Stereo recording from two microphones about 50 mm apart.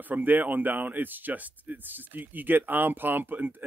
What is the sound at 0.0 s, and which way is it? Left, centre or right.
Speech, right.